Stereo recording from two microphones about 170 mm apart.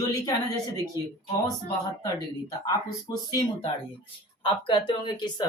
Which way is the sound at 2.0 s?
20° left (ahead or behind).